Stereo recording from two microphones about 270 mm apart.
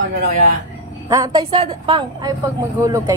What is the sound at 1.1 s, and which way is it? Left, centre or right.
Speech, centre.